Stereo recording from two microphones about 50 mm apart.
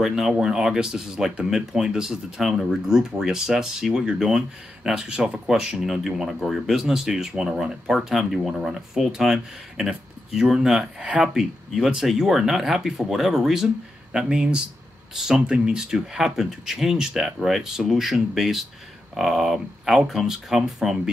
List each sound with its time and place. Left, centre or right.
0.0 s speech: centre
11.0 s speech: right
11.3 s speech: centre